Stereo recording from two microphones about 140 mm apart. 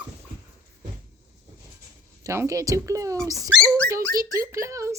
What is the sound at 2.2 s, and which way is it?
Speech, 20° right (ahead or behind).